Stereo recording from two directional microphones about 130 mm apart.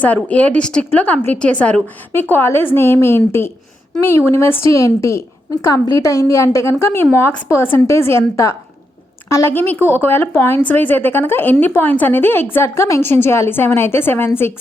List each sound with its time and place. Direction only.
0.3 s a woman's voice: 10° left (ahead or behind)